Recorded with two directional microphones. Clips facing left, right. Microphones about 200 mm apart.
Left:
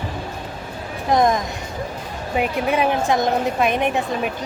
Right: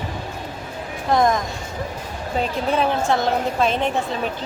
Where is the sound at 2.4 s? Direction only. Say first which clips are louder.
Left 1 dB; 15° left (ahead or behind).